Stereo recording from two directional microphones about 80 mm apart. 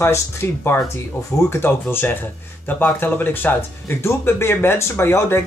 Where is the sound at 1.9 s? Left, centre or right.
Left.